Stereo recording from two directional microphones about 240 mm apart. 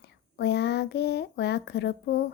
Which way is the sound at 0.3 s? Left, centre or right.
Left.